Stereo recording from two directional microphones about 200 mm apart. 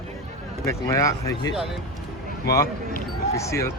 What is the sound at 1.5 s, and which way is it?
Speech, centre (ahead or behind).